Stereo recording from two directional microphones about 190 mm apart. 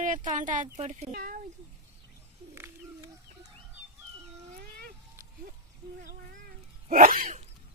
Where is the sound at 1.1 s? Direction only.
50° right (ahead or behind).